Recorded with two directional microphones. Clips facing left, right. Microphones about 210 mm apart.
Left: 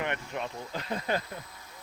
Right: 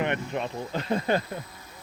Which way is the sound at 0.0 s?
25° right (ahead or behind).